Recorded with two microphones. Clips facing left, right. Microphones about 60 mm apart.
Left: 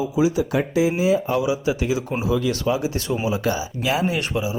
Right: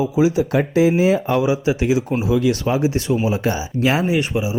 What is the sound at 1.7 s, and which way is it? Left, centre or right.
Speech, right.